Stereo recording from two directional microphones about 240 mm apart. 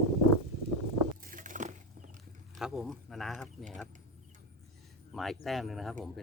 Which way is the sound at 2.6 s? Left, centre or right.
Centre.